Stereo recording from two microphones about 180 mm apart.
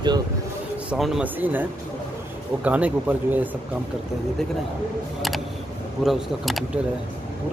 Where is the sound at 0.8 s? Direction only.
Centre (ahead or behind).